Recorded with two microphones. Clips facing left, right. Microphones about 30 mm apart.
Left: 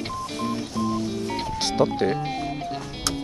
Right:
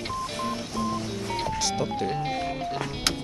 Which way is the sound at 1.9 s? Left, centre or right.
Left.